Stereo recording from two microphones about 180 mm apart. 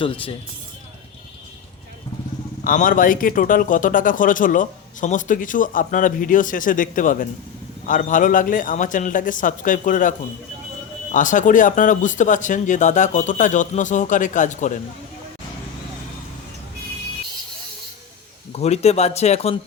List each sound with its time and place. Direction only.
0.0 s speech: 30° left (ahead or behind)
2.6 s a man's voice: 50° left (ahead or behind)
18.5 s speech: 35° left (ahead or behind)